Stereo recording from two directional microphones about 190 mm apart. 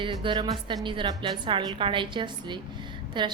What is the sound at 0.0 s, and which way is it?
A woman's voice, 25° right (ahead or behind).